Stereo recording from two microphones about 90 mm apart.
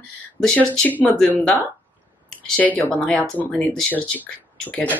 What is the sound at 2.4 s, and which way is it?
Speech, 15° left (ahead or behind).